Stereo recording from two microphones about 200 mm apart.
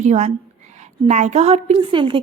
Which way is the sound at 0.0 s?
35° right (ahead or behind).